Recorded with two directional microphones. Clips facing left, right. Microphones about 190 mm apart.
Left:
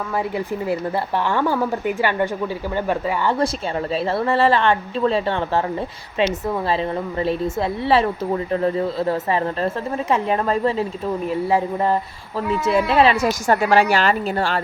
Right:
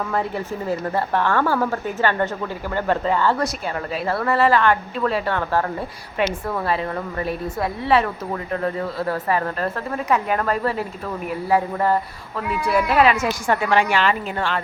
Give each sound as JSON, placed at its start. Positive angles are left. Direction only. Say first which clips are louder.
{"t": 0.3, "sound": "a woman's voice", "louder": "left 2 dB", "side_deg": 15}